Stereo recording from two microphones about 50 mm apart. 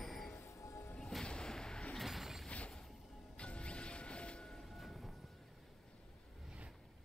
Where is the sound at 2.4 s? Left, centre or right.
Left.